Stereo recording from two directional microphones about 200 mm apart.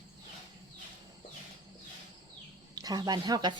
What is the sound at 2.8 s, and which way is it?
Speech, 20° right (ahead or behind).